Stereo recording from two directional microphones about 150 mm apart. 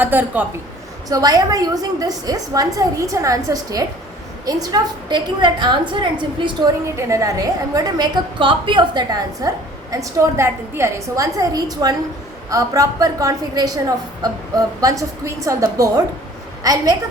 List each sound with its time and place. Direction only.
0.0 s a woman's voice: 10° right (ahead or behind)
1.1 s a woman's voice: 25° right (ahead or behind)
6.9 s a woman's voice: 20° right (ahead or behind)